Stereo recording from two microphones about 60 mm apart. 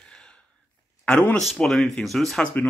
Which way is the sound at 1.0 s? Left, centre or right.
Left.